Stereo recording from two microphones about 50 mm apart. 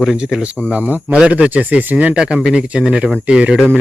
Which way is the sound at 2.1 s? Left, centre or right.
Centre.